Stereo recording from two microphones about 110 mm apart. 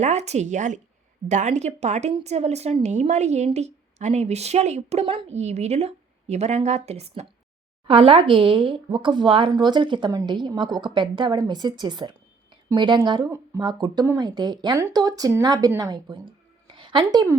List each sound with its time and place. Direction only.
0.0 s a woman's voice: 90° right
2.8 s a woman's voice: 90° right; by 7.1 s 70° right (ahead or behind)
7.9 s a woman's voice: 55° right (ahead or behind)